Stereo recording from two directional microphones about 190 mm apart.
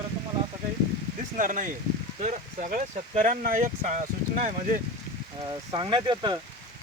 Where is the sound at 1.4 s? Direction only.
45° right (ahead or behind).